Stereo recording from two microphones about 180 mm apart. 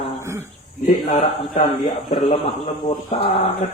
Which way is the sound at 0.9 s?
35° left (ahead or behind).